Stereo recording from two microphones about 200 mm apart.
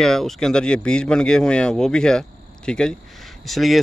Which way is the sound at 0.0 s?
Centre (ahead or behind).